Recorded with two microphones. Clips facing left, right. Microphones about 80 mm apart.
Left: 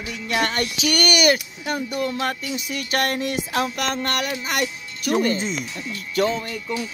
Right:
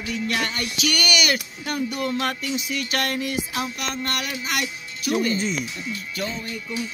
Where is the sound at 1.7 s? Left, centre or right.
Left.